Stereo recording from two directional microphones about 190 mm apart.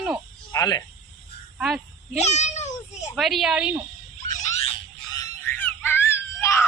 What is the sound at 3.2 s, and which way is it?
Speech, centre (ahead or behind).